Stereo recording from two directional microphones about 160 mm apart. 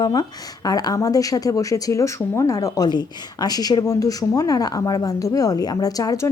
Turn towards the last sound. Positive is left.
turn(degrees=20)  # may be behind; listen again after turning